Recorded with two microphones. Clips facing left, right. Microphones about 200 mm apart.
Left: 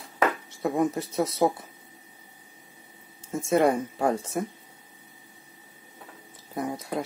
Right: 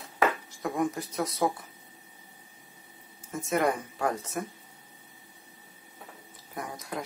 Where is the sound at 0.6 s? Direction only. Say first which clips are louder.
Left 6 dB; 25° left (ahead or behind).